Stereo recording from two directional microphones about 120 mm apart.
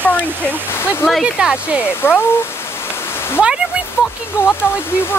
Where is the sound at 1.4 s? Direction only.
10° right (ahead or behind).